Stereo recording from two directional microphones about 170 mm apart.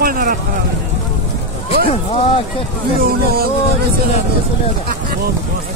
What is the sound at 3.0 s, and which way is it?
Speech, 60° right (ahead or behind).